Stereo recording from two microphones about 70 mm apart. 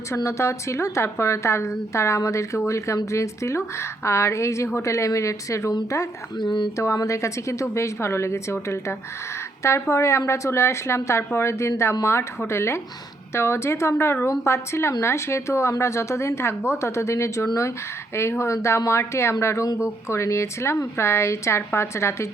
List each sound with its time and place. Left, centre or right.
0.3 s a woman's voice: left
6.4 s speech: left
6.7 s a woman's voice: left